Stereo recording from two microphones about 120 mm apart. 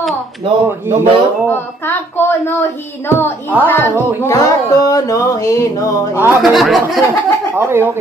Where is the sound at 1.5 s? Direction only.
15° left (ahead or behind).